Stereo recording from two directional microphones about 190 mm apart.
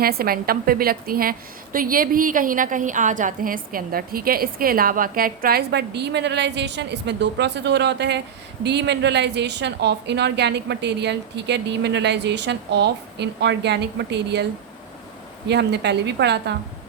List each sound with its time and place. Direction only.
0.0 s a woman's voice: 50° right (ahead or behind)
15.4 s a woman's voice: 65° right (ahead or behind)